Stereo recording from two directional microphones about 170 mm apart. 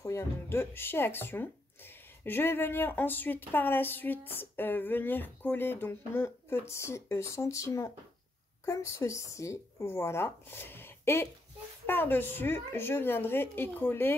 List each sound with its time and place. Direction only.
0.0 s speech: 15° left (ahead or behind)